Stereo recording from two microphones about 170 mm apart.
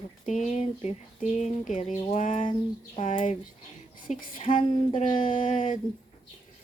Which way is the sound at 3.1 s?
50° left (ahead or behind).